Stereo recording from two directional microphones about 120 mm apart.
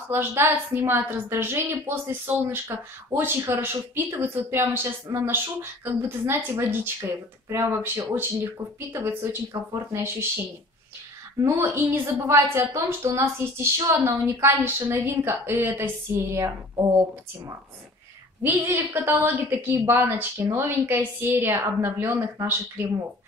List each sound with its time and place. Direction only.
0.1 s a woman's voice: 20° right (ahead or behind)
11.4 s a woman's voice: 20° right (ahead or behind)
18.4 s a woman's voice: 20° right (ahead or behind)